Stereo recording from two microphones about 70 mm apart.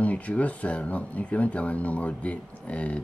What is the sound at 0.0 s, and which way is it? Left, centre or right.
Speech, centre.